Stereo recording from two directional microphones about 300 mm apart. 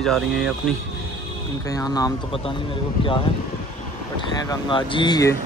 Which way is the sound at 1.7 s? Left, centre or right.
Centre.